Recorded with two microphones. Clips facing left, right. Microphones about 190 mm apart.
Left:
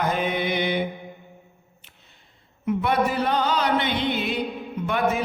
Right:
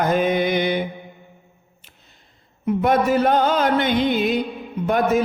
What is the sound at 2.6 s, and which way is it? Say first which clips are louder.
Mantra: right 4 dB; 40° right (ahead or behind).